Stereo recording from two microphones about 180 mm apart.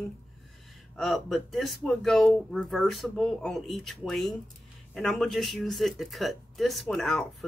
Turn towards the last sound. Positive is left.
turn(degrees=5)  # may be behind; listen again after turning